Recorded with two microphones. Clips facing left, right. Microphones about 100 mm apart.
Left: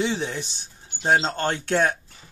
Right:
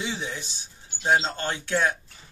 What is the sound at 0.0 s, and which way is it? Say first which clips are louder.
Speech: left 6 dB; 55° left (ahead or behind).